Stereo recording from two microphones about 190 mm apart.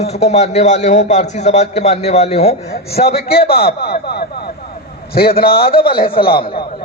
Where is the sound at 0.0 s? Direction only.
35° left (ahead or behind).